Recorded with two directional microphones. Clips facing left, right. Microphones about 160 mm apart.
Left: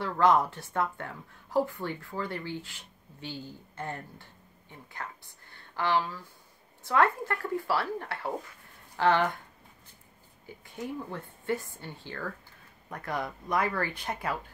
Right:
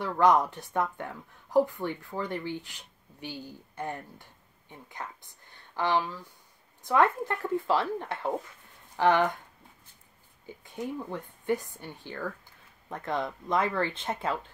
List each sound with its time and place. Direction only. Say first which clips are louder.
0.0 s a woman's voice: right 1 dB; 15° right (ahead or behind)
10.4 s a woman's voice: right 2 dB; 20° right (ahead or behind)